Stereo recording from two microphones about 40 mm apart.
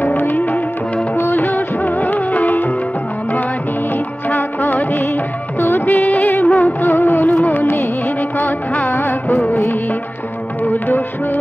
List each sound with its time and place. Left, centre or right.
0.0 s music: left
1.1 s music of bollywood: left
1.5 s music of bollywood: left
4.4 s music of bollywood: left
6.4 s music of bollywood: left
6.9 s music: left
8.8 s music: left
10.6 s music: left